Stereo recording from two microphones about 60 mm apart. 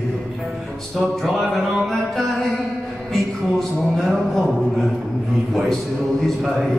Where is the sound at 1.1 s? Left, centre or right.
Centre.